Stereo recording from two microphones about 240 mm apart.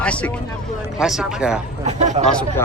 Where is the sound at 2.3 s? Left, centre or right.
Centre.